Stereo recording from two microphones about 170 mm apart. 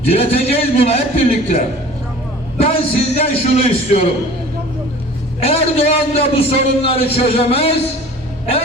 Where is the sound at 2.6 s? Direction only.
35° left (ahead or behind).